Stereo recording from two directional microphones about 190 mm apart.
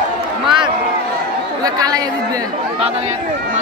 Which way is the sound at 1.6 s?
20° right (ahead or behind).